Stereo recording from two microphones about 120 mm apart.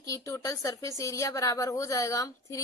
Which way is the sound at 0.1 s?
25° left (ahead or behind).